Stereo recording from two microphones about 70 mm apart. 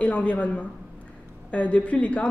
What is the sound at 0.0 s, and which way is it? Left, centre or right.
A woman's voice, centre.